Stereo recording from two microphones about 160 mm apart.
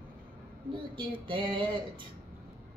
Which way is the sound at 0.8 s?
30° right (ahead or behind).